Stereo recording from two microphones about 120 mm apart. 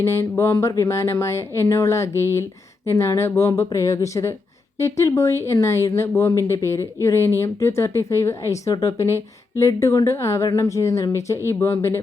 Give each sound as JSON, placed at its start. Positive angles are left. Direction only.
{"t": 0.0, "sound": "speech", "side_deg": 20}